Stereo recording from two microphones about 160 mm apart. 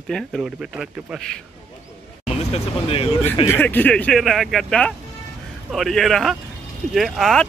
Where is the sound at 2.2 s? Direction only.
40° left (ahead or behind).